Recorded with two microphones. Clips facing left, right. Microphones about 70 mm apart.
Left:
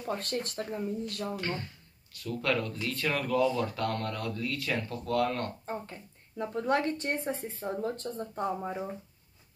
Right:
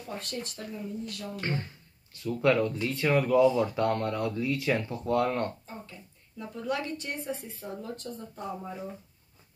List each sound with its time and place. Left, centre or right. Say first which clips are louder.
0.2 s speech: left 4 dB; left
2.2 s speech: right 6 dB; centre
5.7 s speech: left 6 dB; left